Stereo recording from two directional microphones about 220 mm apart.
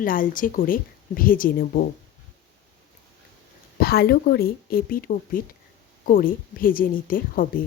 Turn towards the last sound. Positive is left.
turn(degrees=40)  # may be behind; listen again after turning